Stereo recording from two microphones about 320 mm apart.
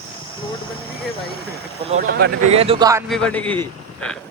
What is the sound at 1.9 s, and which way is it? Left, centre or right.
Speech, right.